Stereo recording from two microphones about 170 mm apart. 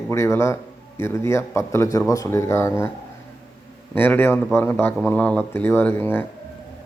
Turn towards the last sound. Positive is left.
turn(degrees=10)  # may be behind; listen again after turning